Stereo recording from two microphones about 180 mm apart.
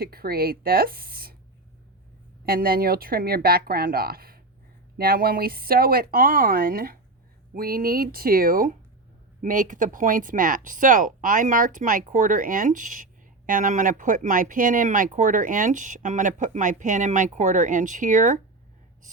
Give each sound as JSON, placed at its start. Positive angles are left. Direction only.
{"t": 0.0, "sound": "speech", "side_deg": -55}
{"t": 2.5, "sound": "speech", "side_deg": -55}